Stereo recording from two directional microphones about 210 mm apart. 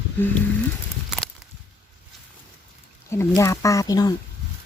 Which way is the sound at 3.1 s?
15° left (ahead or behind).